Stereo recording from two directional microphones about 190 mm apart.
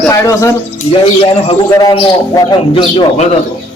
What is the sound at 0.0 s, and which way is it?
Speech, 15° left (ahead or behind).